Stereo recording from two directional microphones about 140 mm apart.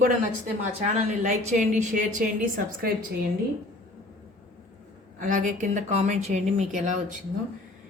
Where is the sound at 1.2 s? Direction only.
60° right (ahead or behind).